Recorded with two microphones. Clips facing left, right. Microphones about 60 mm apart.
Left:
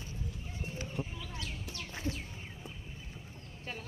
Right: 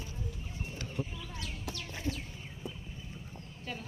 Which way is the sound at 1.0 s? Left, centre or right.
Left.